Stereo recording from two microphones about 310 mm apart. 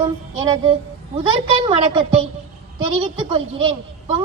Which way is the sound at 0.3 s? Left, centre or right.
Centre.